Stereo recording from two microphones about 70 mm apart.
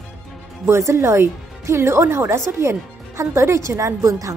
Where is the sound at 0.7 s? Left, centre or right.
Right.